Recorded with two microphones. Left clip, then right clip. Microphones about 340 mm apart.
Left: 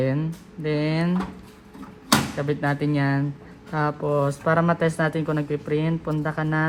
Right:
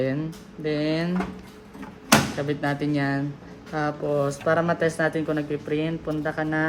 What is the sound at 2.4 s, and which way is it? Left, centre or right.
Speech, centre.